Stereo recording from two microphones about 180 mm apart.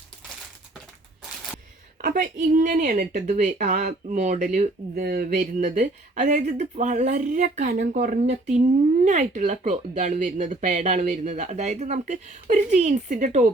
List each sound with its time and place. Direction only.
2.0 s a woman's voice: 50° right (ahead or behind)